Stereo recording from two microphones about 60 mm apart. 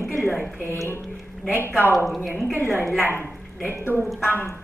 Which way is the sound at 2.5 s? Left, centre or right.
Left.